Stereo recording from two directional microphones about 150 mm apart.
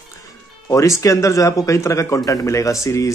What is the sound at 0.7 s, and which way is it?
Speech, 20° left (ahead or behind).